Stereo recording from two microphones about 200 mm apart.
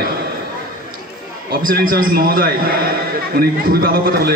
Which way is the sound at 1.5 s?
45° right (ahead or behind).